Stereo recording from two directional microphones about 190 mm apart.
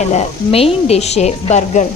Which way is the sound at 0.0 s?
35° left (ahead or behind).